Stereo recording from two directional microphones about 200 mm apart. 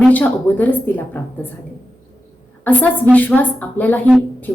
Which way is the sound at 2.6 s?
10° left (ahead or behind).